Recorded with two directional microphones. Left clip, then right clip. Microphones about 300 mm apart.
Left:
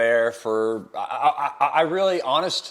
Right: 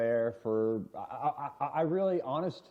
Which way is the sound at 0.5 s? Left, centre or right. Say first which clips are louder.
Left 8 dB; left.